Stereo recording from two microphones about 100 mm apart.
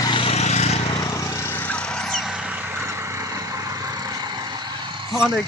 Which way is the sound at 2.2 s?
10° right (ahead or behind).